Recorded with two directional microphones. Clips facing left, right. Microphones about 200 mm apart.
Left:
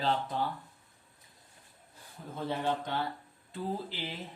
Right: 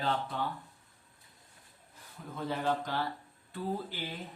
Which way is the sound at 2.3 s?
25° left (ahead or behind).